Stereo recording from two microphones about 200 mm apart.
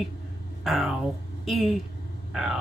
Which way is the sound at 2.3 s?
Centre (ahead or behind).